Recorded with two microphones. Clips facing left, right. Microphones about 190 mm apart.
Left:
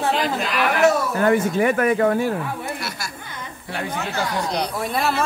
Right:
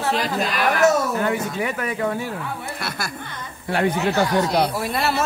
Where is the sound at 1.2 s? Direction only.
50° left (ahead or behind).